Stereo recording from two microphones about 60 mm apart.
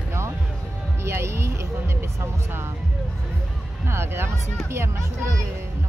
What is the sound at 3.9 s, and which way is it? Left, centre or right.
Speech, right.